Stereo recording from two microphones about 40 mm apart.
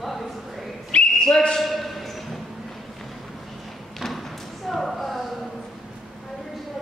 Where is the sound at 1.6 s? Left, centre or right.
Centre.